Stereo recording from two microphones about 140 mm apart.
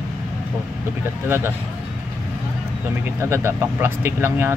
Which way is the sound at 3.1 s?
20° right (ahead or behind).